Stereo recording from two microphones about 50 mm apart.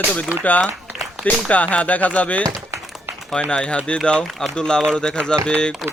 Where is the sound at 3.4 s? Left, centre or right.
Centre.